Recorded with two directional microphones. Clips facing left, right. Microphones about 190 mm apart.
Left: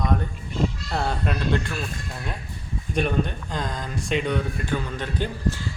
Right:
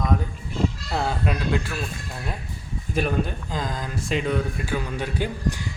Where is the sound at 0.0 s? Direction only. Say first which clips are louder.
Even; centre (ahead or behind).